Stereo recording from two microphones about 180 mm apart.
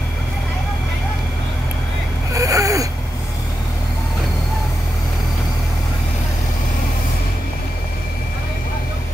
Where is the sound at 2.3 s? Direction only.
20° right (ahead or behind).